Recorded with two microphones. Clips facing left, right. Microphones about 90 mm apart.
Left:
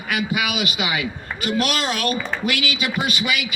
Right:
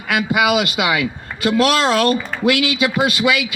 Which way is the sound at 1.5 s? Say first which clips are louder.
Right 7 dB; 90° right.